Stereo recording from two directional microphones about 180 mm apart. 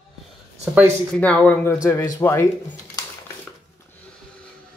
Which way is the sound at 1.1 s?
5° left (ahead or behind).